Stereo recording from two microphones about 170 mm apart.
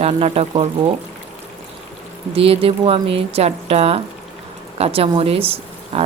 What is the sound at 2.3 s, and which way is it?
Speech, 35° right (ahead or behind).